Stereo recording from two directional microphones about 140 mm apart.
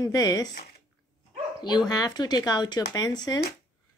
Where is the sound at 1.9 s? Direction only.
30° left (ahead or behind).